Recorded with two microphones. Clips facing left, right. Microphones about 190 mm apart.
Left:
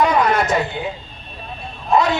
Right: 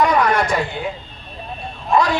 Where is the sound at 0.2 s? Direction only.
25° left (ahead or behind).